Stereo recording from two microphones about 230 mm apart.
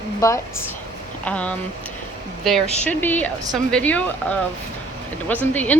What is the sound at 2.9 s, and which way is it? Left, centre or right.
A woman's voice, centre.